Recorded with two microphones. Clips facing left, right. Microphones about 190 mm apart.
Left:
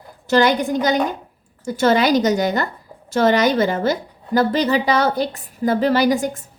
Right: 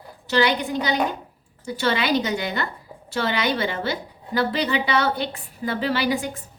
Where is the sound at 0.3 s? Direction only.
45° left (ahead or behind).